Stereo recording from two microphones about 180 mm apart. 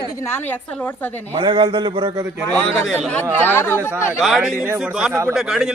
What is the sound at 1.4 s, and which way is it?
Speech, 30° right (ahead or behind).